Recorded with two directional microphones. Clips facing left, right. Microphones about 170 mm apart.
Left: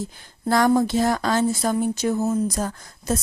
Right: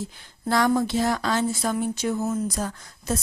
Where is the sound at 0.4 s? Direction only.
45° left (ahead or behind).